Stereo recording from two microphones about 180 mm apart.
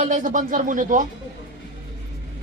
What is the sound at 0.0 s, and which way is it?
Speech, 45° right (ahead or behind).